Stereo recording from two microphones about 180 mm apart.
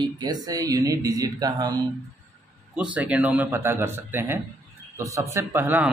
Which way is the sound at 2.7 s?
5° right (ahead or behind).